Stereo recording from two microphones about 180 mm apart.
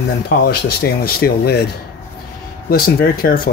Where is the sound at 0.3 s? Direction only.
60° left (ahead or behind).